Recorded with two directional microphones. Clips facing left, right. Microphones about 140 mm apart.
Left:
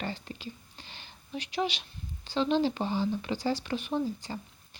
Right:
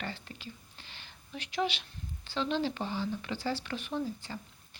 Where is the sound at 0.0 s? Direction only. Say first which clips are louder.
Left 4 dB; 20° left (ahead or behind).